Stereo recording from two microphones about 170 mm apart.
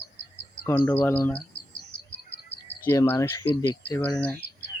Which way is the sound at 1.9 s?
90° left.